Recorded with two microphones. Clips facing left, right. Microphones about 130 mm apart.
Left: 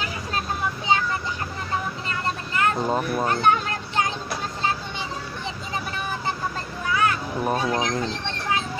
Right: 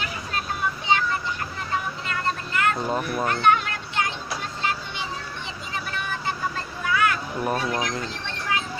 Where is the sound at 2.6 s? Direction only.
30° left (ahead or behind).